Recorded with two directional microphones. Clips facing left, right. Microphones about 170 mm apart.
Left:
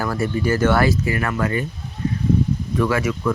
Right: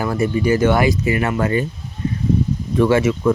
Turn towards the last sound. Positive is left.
turn(degrees=-25)  # may be behind; listen again after turning